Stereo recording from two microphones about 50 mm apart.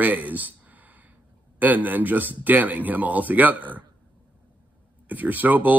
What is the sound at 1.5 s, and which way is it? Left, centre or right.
Speech, right.